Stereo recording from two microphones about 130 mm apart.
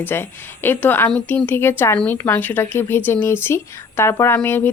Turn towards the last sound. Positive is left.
turn(degrees=15)  # may be behind; listen again after turning